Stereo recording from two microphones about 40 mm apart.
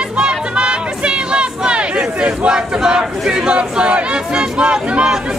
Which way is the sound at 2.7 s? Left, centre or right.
Centre.